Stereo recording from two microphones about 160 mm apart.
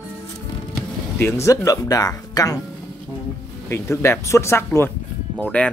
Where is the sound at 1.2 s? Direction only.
15° left (ahead or behind).